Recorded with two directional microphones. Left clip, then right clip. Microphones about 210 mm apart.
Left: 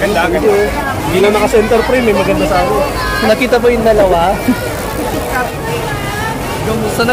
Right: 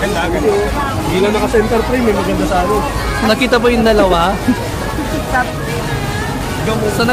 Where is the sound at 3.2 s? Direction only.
Centre (ahead or behind).